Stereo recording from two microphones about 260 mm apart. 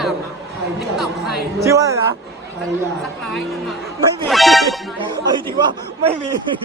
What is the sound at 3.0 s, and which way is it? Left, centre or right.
A man's voice, centre.